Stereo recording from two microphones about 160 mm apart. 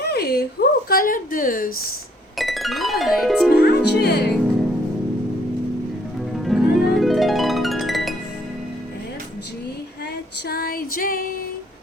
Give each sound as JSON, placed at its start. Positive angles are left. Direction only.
{"t": 0.0, "sound": "speech", "side_deg": 80}
{"t": 2.4, "sound": "music", "side_deg": 0}
{"t": 3.5, "sound": "speech", "side_deg": 90}
{"t": 6.4, "sound": "music", "side_deg": 0}
{"t": 10.5, "sound": "music", "side_deg": 70}